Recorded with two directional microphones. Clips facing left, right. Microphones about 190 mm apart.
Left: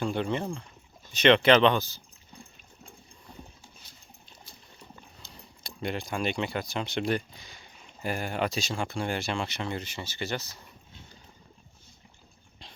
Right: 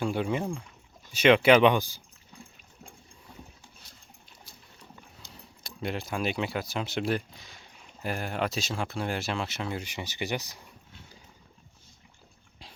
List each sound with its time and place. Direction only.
0.0 s speech: 5° right (ahead or behind)
4.9 s speech: centre (ahead or behind)